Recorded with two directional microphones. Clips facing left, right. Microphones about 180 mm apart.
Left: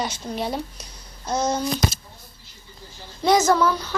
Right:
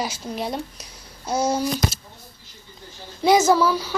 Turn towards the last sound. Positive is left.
turn(degrees=-5)  # may be behind; listen again after turning